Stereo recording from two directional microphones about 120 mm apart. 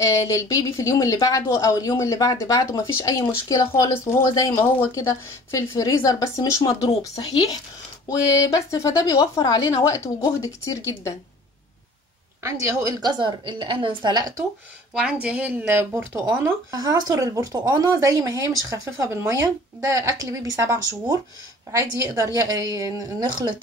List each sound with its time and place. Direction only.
0.0 s a woman's voice: 25° left (ahead or behind)
12.4 s a woman's voice: 25° right (ahead or behind)
15.0 s a woman's voice: 10° right (ahead or behind); by 23.5 s 35° right (ahead or behind)